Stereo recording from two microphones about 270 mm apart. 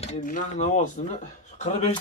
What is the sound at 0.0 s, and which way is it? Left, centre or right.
Speech, left.